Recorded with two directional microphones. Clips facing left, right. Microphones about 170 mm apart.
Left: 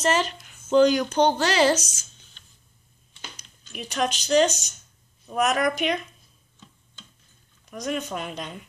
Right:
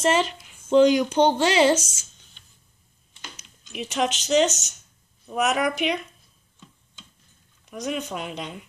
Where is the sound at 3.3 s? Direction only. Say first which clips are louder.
Right 5 dB; 20° right (ahead or behind).